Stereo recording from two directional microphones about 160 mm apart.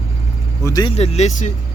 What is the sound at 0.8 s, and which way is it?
Speech, 40° left (ahead or behind).